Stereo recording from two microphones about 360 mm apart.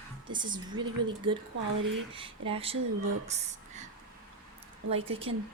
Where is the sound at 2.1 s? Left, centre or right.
Centre.